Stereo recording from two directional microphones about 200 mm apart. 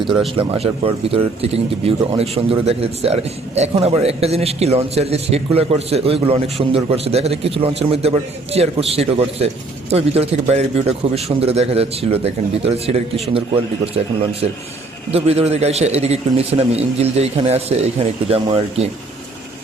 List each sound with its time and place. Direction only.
0.3 s a man's voice: 30° right (ahead or behind)